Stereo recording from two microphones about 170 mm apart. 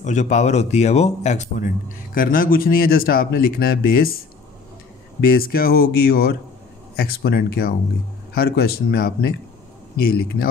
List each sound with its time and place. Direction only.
0.0 s a man's voice: 45° left (ahead or behind)
2.1 s speech: 55° left (ahead or behind)
5.2 s speech: 60° left (ahead or behind)